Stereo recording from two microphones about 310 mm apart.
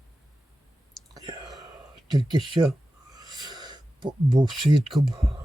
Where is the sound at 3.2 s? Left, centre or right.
Centre.